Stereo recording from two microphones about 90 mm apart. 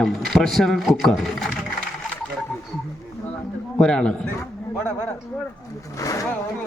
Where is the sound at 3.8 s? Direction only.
10° left (ahead or behind).